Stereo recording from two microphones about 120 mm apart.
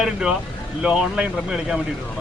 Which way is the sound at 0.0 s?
5° right (ahead or behind).